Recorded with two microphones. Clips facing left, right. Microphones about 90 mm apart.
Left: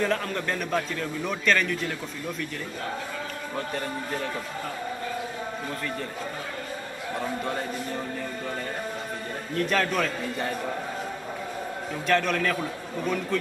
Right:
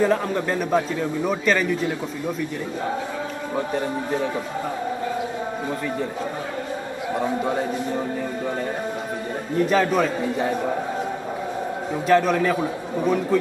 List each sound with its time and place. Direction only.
0.0 s a man's voice: 10° right (ahead or behind)
3.5 s a man's voice: 10° right (ahead or behind)
7.4 s a man's voice: 10° right (ahead or behind)
9.6 s a man's voice: 5° right (ahead or behind)
12.1 s a man's voice: 5° right (ahead or behind)